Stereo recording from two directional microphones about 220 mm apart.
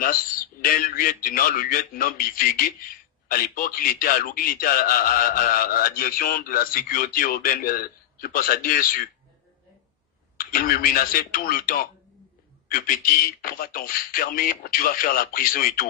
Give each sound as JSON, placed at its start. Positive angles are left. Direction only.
{"t": 0.0, "sound": "a man's voice", "side_deg": 40}
{"t": 10.3, "sound": "a man's voice", "side_deg": 40}